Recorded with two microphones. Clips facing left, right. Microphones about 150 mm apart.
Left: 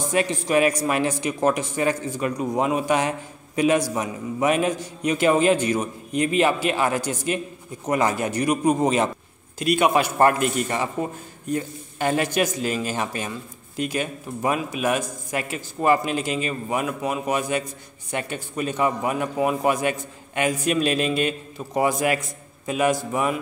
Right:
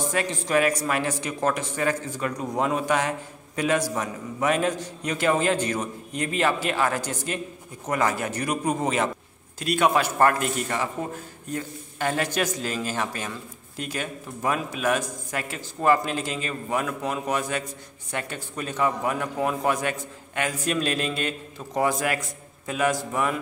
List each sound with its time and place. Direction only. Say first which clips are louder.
0.1 s a man's voice: left 5 dB; 15° left (ahead or behind)